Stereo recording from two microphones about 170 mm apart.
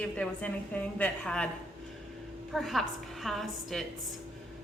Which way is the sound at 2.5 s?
Centre (ahead or behind).